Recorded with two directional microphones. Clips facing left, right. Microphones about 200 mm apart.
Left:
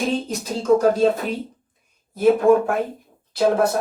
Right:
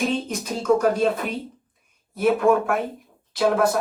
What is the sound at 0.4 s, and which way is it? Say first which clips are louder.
Speech: left 3 dB; 30° left (ahead or behind).